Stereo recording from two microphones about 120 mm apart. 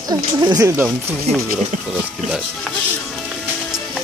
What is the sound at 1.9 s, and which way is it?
Speech, 5° right (ahead or behind).